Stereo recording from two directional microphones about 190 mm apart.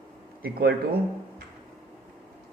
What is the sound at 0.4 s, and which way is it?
Speech, 50° right (ahead or behind).